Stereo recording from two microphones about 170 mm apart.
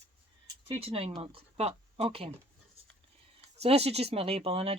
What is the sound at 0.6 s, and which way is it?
Speech, 35° right (ahead or behind).